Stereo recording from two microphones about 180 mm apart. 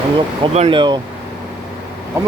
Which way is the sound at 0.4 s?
30° right (ahead or behind).